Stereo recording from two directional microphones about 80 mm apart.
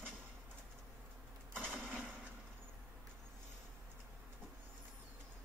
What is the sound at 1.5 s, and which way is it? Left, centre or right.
Mechanisms, centre.